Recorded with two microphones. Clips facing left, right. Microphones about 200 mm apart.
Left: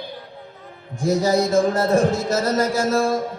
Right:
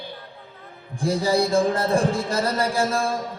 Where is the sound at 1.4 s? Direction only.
35° right (ahead or behind).